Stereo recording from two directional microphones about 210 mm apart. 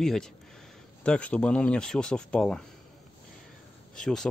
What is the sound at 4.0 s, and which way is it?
Speech, centre (ahead or behind).